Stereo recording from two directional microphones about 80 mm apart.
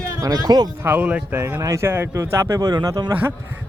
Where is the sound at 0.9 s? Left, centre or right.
Right.